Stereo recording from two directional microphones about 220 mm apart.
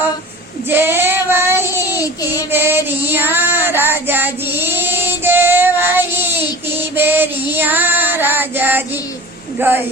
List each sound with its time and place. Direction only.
0.7 s child singing: 10° right (ahead or behind)
1.9 s child singing: 15° left (ahead or behind)
2.5 s child singing: 10° right (ahead or behind)
9.6 s speech: 10° right (ahead or behind)